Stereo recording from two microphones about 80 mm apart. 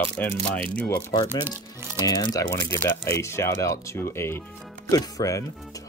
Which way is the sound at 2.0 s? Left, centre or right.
Left.